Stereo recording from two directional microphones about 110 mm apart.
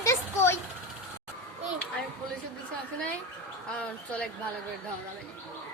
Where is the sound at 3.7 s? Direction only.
10° left (ahead or behind).